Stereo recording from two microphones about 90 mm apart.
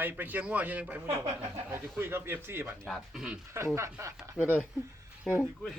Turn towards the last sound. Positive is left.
turn(degrees=0)  # may be behind; listen again after turning